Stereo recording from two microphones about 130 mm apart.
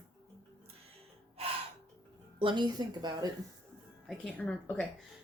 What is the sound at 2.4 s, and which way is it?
Speech, 35° right (ahead or behind).